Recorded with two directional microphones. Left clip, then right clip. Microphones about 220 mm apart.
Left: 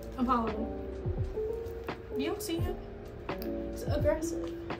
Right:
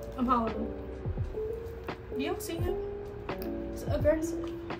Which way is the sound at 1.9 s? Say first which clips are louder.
Right 1 dB; 5° left (ahead or behind).